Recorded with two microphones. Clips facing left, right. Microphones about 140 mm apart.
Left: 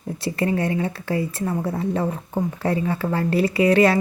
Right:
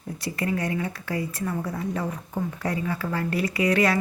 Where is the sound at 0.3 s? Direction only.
25° left (ahead or behind).